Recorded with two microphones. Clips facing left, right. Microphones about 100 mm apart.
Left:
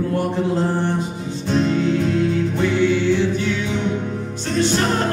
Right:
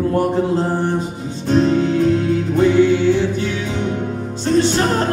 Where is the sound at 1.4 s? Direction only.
40° right (ahead or behind).